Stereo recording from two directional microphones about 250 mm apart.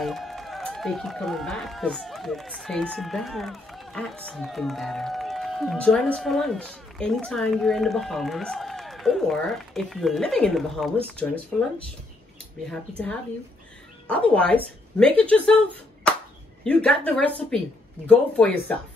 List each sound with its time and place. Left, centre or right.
0.0 s speech: centre
12.9 s speech: centre
14.3 s speech: centre
16.6 s speech: centre